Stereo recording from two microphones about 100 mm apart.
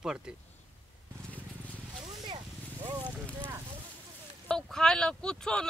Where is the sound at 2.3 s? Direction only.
45° right (ahead or behind).